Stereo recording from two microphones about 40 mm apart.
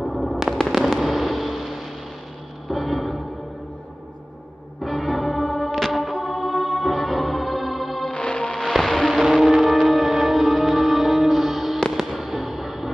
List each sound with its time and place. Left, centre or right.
0.0 s fireworks: centre
2.7 s a sound: centre
4.8 s music: centre
8.1 s music: left
8.5 s music: centre
9.2 s music: centre